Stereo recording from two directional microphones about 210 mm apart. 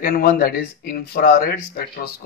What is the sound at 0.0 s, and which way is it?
Speech, 45° left (ahead or behind).